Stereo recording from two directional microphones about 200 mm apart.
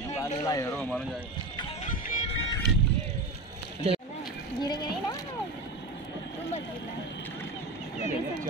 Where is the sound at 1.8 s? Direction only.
40° left (ahead or behind).